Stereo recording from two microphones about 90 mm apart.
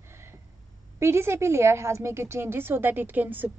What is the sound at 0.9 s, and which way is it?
A woman's voice, 30° right (ahead or behind).